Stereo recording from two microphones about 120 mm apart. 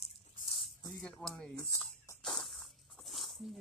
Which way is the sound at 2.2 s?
5° left (ahead or behind).